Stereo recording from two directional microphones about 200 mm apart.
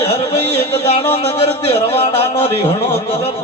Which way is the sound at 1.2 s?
30° left (ahead or behind).